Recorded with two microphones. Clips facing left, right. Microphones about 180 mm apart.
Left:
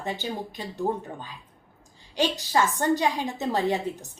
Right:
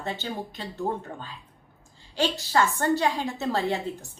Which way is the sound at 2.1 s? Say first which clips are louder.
Even; 15° left (ahead or behind).